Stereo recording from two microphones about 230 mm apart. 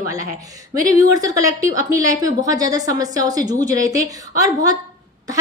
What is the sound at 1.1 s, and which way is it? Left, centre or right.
A woman's voice, centre.